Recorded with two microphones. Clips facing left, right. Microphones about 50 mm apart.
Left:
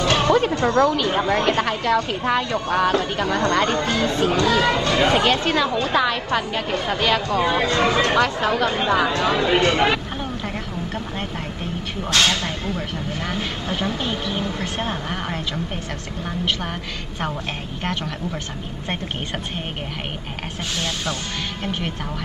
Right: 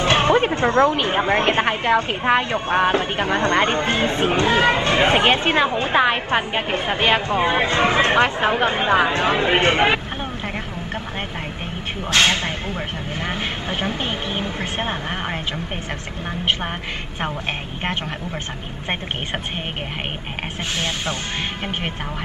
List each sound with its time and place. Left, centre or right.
0.0 s speech: right
12.1 s speech: right
20.8 s speech: right